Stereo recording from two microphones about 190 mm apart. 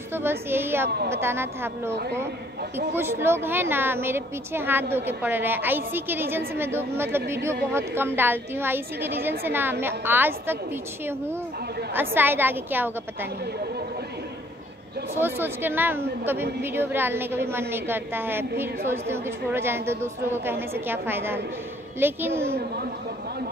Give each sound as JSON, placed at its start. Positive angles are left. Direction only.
{"t": 0.1, "sound": "a woman's voice", "side_deg": -10}
{"t": 0.8, "sound": "a woman's voice", "side_deg": -60}
{"t": 1.1, "sound": "a woman's voice", "side_deg": -10}
{"t": 3.0, "sound": "a woman's voice", "side_deg": -10}
{"t": 15.1, "sound": "a woman's voice", "side_deg": -10}